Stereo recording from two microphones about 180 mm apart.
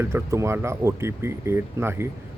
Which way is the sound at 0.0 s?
15° right (ahead or behind).